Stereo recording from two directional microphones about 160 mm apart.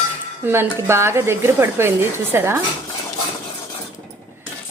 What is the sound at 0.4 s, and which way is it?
Speech, 15° right (ahead or behind).